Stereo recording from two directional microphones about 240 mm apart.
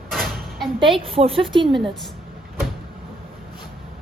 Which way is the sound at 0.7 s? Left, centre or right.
Right.